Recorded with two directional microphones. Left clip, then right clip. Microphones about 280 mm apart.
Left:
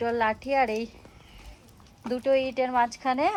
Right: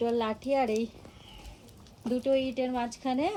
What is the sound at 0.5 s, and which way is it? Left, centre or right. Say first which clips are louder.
Speech: left 2 dB; left.